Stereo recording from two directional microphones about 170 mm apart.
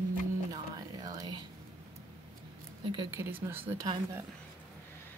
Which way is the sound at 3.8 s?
25° right (ahead or behind).